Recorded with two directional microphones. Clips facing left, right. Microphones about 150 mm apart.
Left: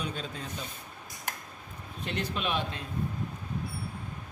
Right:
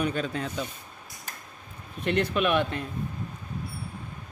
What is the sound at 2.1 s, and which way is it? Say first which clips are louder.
Speech: right 8 dB; 60° right (ahead or behind).